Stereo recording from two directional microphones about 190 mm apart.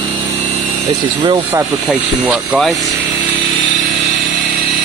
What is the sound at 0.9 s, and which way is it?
Speech, 25° right (ahead or behind).